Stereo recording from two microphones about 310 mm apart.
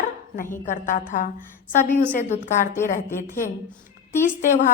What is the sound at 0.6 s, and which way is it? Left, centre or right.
Speech, left.